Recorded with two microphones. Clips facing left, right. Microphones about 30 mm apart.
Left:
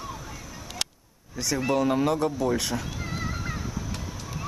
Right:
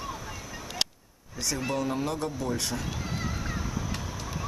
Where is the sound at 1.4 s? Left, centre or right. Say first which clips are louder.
Left 4 dB; centre.